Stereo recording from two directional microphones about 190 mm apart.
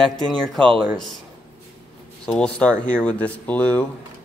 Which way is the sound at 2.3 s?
5° left (ahead or behind).